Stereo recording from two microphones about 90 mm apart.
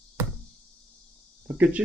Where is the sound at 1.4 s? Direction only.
15° right (ahead or behind).